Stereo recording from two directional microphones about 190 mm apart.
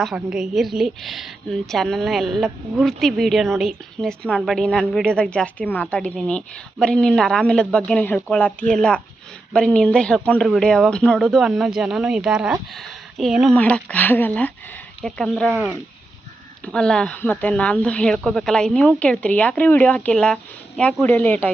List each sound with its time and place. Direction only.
0.0 s a woman's voice: centre (ahead or behind)
15.5 s speech: 10° right (ahead or behind)
16.6 s speech: 5° left (ahead or behind)